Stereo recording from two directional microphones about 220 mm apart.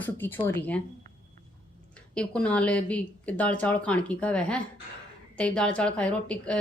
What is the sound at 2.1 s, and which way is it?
Speech, 5° left (ahead or behind).